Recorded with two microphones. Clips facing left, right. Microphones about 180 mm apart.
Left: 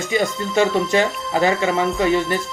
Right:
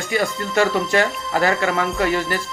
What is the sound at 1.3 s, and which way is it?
Speech, 20° left (ahead or behind).